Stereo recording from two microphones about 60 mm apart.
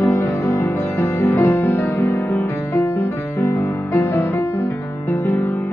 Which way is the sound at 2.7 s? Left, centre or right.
Left.